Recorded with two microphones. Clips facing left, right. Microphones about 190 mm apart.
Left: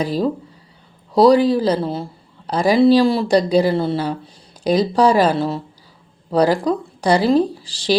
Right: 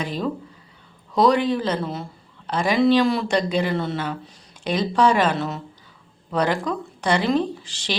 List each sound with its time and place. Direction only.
0.0 s speech: 35° left (ahead or behind)